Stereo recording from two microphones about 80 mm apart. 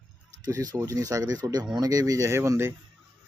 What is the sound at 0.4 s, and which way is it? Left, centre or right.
Speech, right.